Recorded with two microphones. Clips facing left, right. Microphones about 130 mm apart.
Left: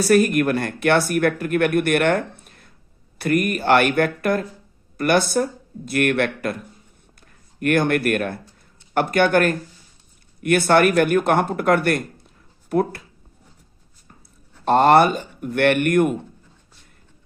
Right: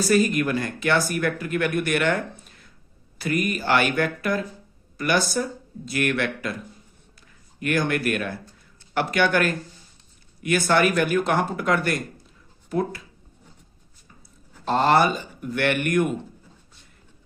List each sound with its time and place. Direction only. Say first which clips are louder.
0.0 s speech: left 4 dB; 60° left (ahead or behind)
14.6 s speech: left 5 dB; 55° left (ahead or behind)